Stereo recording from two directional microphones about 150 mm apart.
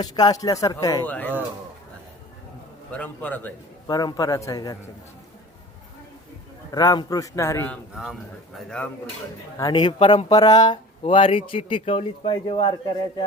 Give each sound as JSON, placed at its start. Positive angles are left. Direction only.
{"t": 0.0, "sound": "a man's voice", "side_deg": 25}
{"t": 1.0, "sound": "a man's voice", "side_deg": 10}
{"t": 2.9, "sound": "a man's voice", "side_deg": 10}
{"t": 3.8, "sound": "a man's voice", "side_deg": 25}
{"t": 6.7, "sound": "a man's voice", "side_deg": 25}
{"t": 9.6, "sound": "speech", "side_deg": 25}
{"t": 10.3, "sound": "a man's voice", "side_deg": 25}